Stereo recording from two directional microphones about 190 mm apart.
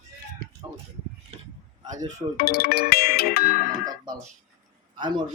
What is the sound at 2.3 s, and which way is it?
Music, 55° left (ahead or behind).